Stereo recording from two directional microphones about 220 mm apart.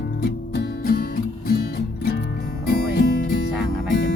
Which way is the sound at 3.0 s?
45° left (ahead or behind).